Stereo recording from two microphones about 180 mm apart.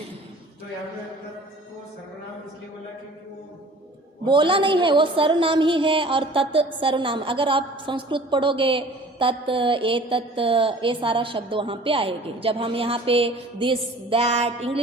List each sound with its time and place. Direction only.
4.3 s a woman's voice: 25° right (ahead or behind)